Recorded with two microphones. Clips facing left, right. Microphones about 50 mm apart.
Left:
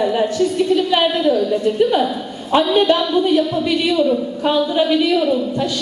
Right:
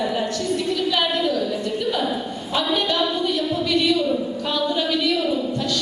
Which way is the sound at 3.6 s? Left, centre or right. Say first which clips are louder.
Left 4 dB; centre.